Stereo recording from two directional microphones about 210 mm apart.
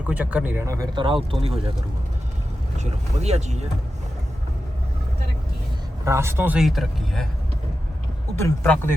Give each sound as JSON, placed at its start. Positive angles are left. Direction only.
{"t": 0.0, "sound": "speech", "side_deg": -5}
{"t": 2.7, "sound": "speech", "side_deg": -30}
{"t": 6.1, "sound": "speech", "side_deg": -10}
{"t": 8.4, "sound": "speech", "side_deg": 10}